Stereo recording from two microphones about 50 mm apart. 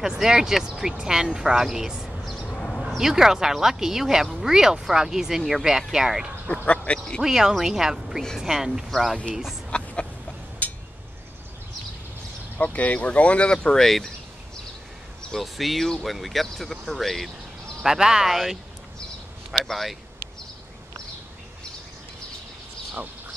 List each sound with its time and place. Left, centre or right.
0.0 s speech: centre
2.4 s a sound: left
3.0 s speech: centre
6.4 s speech: left
7.2 s speech: centre
9.7 s a sound: left
10.6 s a sound: left
12.5 s speech: left
13.8 s speech: centre
15.3 s speech: centre
17.8 s speech: centre
18.3 s speech: centre